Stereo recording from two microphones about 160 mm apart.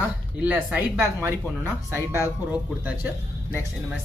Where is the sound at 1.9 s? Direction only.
20° left (ahead or behind).